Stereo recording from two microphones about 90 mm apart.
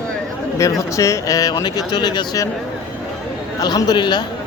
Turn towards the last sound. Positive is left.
turn(degrees=55)  # may be behind; listen again after turning